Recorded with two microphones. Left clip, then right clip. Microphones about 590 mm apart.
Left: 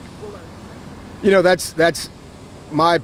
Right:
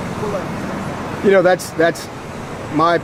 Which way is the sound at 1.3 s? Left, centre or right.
Left.